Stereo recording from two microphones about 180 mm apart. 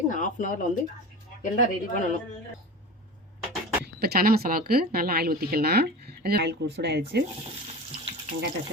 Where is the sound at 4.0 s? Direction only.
60° right (ahead or behind).